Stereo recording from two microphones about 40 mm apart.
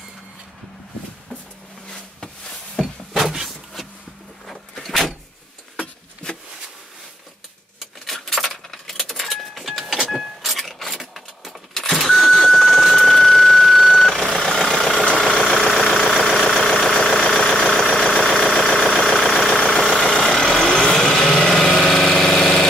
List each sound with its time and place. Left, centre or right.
2.2 s a sound: centre
3.1 s a sound: centre
4.5 s a sound: centre
8.1 s keys jangling: centre
10.0 s vehicle: centre
12.0 s car: centre
12.4 s vehicle: centre
15.8 s engine: centre
18.5 s vehicle: centre
19.0 s engine: centre
19.5 s vehicle: centre
21.2 s light engine: centre
21.8 s engine: centre